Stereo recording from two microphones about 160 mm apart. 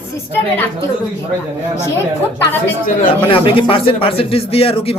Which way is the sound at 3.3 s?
35° left (ahead or behind).